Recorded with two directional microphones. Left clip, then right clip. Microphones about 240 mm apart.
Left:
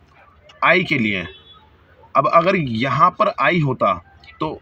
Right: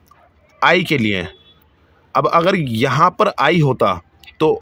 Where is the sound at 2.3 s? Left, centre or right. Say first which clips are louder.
Even; right.